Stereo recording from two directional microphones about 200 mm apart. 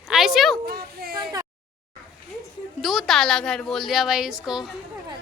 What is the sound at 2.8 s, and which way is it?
Speech, centre (ahead or behind).